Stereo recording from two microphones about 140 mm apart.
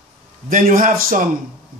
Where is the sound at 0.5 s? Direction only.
75° right (ahead or behind).